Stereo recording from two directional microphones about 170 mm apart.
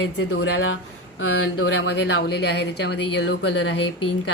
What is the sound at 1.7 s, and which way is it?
A woman's voice, 90° left.